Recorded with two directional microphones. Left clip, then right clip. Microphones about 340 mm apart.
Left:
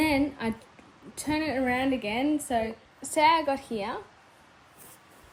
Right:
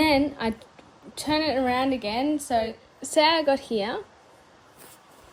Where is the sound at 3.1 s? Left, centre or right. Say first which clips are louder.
Right 2 dB; centre.